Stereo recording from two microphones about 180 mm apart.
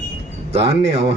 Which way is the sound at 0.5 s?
35° right (ahead or behind).